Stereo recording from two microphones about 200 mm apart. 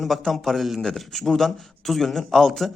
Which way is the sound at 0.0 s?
Centre (ahead or behind).